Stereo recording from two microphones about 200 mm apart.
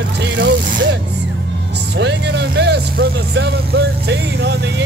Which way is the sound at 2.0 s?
60° right (ahead or behind).